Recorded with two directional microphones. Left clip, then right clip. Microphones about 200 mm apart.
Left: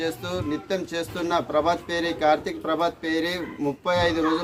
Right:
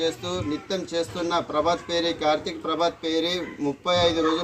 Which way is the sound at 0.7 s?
5° left (ahead or behind).